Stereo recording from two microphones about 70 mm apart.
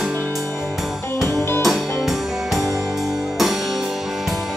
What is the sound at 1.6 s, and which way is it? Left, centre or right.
Music, centre.